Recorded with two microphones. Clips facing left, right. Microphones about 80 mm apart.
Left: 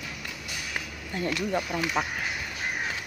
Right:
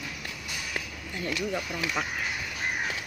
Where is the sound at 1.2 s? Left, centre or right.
Left.